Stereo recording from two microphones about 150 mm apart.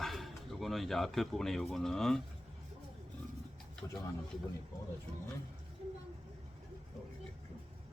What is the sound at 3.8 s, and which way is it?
Speech, 20° left (ahead or behind).